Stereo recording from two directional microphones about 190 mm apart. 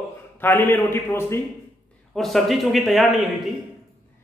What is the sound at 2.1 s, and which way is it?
A man's voice, centre (ahead or behind).